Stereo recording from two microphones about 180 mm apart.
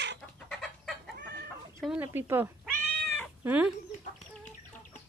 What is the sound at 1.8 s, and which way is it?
Speech, 10° right (ahead or behind).